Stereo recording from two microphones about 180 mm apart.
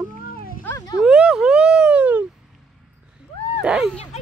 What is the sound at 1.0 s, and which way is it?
Speech, 5° right (ahead or behind).